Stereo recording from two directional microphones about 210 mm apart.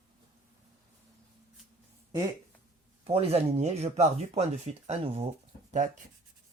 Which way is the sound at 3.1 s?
30° right (ahead or behind).